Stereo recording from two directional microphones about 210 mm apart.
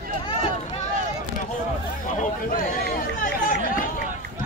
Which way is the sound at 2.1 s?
40° left (ahead or behind).